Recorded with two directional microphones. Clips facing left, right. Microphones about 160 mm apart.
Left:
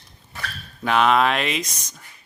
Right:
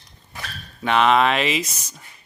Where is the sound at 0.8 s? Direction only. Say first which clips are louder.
Right 1 dB; centre (ahead or behind).